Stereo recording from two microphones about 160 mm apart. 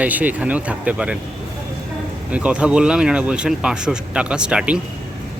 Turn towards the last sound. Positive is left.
turn(degrees=-5)  # may be behind; listen again after turning